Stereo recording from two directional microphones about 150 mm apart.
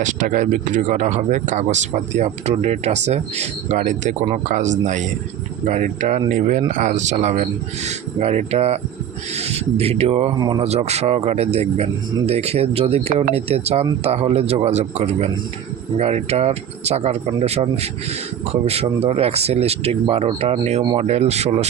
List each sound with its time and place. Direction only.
0.0 s speech: 60° right (ahead or behind); by 10.3 s 45° right (ahead or behind)
10.3 s speech: 25° right (ahead or behind)
10.6 s speech: 45° right (ahead or behind)